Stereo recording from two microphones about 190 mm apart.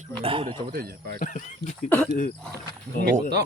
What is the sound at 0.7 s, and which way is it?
Speech, 55° right (ahead or behind).